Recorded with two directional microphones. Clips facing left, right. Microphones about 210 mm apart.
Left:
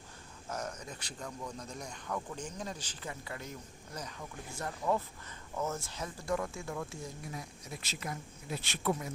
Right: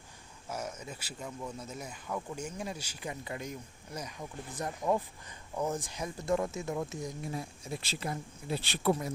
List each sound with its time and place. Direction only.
0.4 s speech: 10° right (ahead or behind); by 9.1 s 35° right (ahead or behind)